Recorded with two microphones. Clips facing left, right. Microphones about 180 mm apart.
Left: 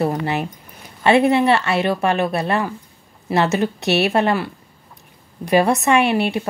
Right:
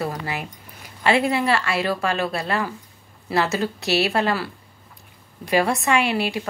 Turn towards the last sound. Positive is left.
turn(degrees=25)  # may be behind; listen again after turning